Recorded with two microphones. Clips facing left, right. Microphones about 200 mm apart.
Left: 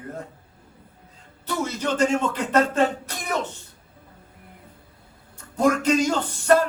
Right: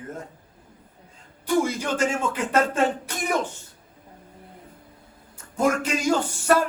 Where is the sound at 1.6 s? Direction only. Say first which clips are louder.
Left 1 dB; 10° right (ahead or behind).